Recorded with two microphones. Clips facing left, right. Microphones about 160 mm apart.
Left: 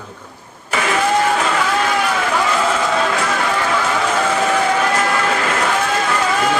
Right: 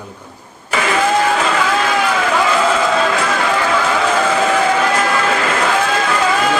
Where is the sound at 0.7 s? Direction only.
90° right.